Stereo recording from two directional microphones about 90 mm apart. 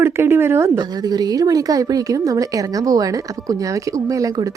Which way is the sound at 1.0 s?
45° right (ahead or behind).